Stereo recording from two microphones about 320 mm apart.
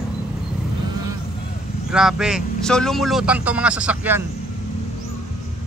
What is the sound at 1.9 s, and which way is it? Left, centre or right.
A man's voice, centre.